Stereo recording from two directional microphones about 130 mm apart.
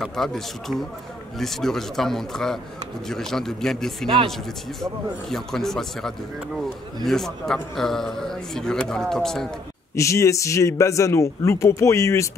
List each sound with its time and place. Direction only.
0.0 s speech: centre (ahead or behind)
5.3 s speech: 5° left (ahead or behind)
9.9 s a man's voice: 25° left (ahead or behind)